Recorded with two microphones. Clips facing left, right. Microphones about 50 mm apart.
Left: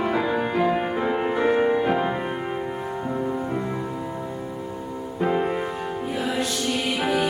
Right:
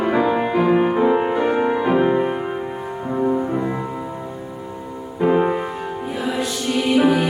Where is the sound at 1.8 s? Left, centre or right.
Right.